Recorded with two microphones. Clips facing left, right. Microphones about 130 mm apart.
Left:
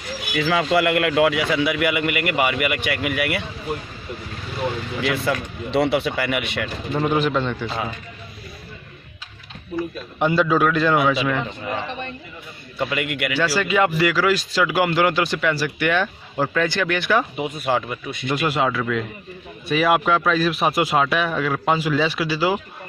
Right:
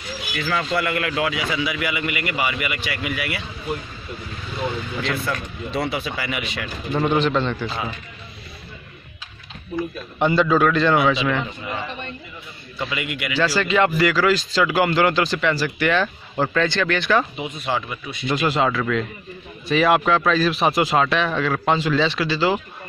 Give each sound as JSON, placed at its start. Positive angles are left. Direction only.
{"t": 0.5, "sound": "a man's voice", "side_deg": 90}
{"t": 4.6, "sound": "speech", "side_deg": 10}
{"t": 5.1, "sound": "a man's voice", "side_deg": 75}
{"t": 6.9, "sound": "speech", "side_deg": 5}
{"t": 9.8, "sound": "speech", "side_deg": 0}
{"t": 12.7, "sound": "a man's voice", "side_deg": 55}
{"t": 13.4, "sound": "speech", "side_deg": 5}
{"t": 17.6, "sound": "speech", "side_deg": 50}
{"t": 18.3, "sound": "speech", "side_deg": 5}